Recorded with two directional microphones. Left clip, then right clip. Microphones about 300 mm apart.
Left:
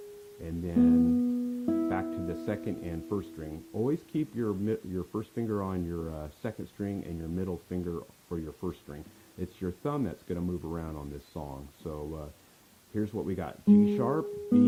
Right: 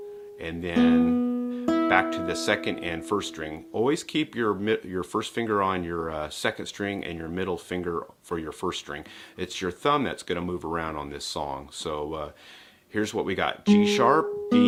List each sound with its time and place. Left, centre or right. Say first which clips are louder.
0.4 s speech: right 4 dB; centre